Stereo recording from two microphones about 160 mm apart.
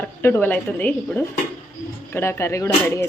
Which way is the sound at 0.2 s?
15° left (ahead or behind).